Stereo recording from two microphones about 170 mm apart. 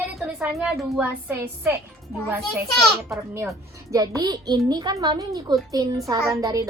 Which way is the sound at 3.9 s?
20° right (ahead or behind).